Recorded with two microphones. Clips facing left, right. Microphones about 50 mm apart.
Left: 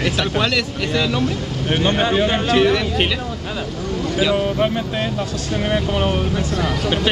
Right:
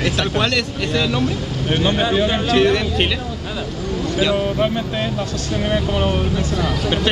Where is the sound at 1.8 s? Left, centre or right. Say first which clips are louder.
Even; left.